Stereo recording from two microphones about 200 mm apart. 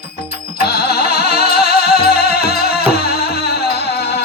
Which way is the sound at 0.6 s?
50° left (ahead or behind).